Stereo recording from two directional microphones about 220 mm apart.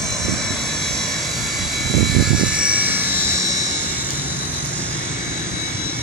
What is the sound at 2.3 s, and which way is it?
Vehicle, 5° right (ahead or behind).